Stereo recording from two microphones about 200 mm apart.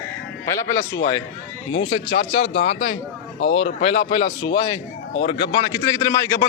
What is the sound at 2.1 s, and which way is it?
A man's voice, 50° left (ahead or behind).